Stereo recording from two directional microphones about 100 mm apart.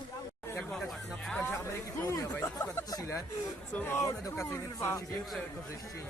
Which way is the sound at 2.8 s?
35° left (ahead or behind).